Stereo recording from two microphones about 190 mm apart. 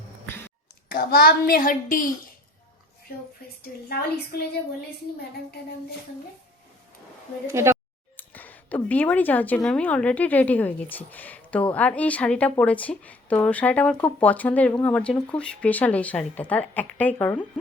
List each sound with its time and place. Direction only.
0.9 s a child's voice: 55° left (ahead or behind)
3.6 s a woman's voice: 55° left (ahead or behind)
7.4 s speech: 15° right (ahead or behind)
8.1 s speech: 10° left (ahead or behind)